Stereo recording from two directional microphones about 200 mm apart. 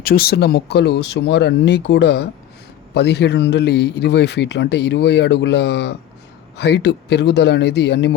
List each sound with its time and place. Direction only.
0.0 s a man's voice: 50° left (ahead or behind)